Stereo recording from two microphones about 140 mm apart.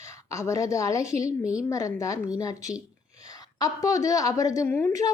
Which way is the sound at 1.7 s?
25° left (ahead or behind).